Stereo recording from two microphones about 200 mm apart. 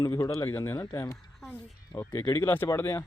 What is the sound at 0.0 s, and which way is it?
Speech, 15° left (ahead or behind).